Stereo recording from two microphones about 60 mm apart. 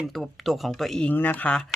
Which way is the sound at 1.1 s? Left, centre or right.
Left.